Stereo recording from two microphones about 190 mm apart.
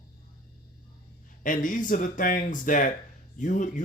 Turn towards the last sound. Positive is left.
turn(degrees=45)  # may be behind; listen again after turning